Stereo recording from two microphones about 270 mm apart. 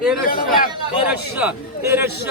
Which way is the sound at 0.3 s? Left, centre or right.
Left.